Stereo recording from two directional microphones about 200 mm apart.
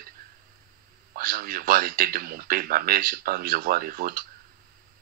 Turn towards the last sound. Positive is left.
turn(degrees=-45)  # may be behind; listen again after turning